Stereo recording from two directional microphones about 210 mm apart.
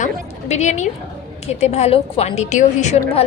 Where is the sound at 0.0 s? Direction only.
35° left (ahead or behind).